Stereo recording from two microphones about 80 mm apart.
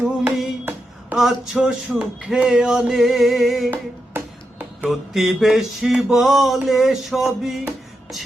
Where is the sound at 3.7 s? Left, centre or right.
Right.